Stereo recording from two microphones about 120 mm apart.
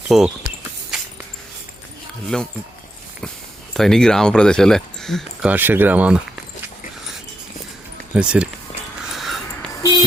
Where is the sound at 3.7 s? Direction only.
5° left (ahead or behind).